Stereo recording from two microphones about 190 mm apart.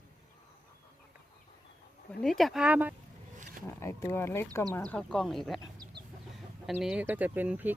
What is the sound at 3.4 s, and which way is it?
Wild animals, 45° right (ahead or behind).